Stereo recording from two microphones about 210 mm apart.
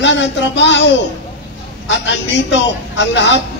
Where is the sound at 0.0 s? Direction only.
60° left (ahead or behind).